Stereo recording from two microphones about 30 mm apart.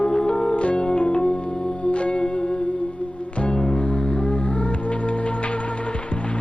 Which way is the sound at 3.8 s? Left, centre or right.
Left.